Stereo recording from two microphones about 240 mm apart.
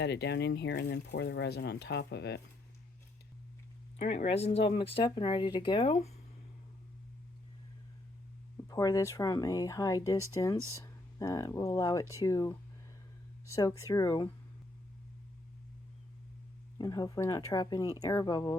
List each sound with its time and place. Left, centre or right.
0.0 s speech: left
3.9 s speech: left
8.5 s speech: centre
16.7 s speech: centre